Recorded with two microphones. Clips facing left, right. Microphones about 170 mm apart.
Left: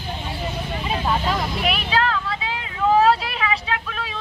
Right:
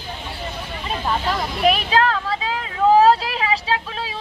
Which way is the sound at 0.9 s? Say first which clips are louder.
Even; centre (ahead or behind).